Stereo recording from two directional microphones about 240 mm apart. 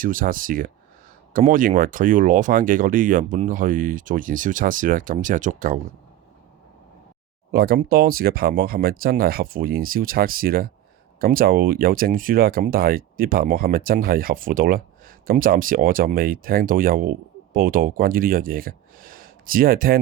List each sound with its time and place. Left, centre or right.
0.0 s speech: right
7.5 s speech: right